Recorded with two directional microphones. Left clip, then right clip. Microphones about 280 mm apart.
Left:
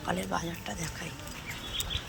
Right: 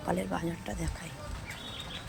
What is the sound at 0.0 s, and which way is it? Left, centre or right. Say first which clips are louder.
Speech: even; centre.